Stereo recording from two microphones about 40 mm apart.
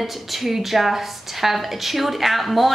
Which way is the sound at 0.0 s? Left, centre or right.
Centre.